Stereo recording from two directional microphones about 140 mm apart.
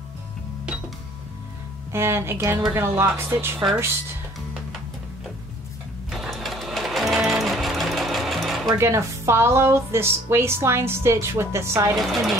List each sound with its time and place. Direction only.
1.9 s a woman's voice: 20° right (ahead or behind)
6.0 s sewing machine: centre (ahead or behind)
8.6 s a woman's voice: 20° right (ahead or behind)